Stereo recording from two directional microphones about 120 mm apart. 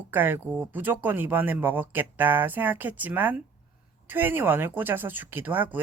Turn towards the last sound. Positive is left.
turn(degrees=-15)  # may be behind; listen again after turning